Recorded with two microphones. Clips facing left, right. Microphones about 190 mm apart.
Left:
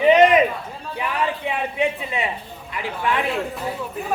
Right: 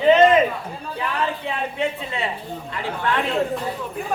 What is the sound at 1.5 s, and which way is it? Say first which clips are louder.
A man's voice: left 2 dB; 15° left (ahead or behind).